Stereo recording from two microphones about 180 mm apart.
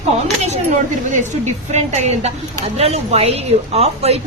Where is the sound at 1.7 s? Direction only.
40° right (ahead or behind).